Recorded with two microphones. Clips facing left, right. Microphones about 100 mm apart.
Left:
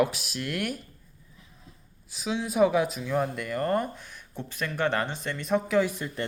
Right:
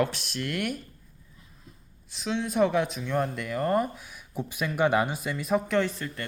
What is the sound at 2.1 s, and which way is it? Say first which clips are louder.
Speech: right 1 dB; 5° left (ahead or behind).